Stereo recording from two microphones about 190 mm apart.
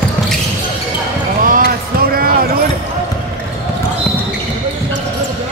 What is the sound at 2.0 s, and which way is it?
Basketball bounce, 50° right (ahead or behind).